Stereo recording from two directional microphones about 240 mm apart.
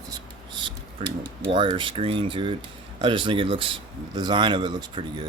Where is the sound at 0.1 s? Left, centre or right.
Centre.